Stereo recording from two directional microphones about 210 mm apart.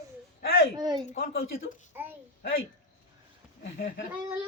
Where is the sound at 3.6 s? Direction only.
55° left (ahead or behind).